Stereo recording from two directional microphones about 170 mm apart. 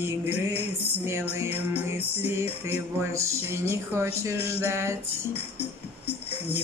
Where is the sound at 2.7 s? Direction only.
15° right (ahead or behind).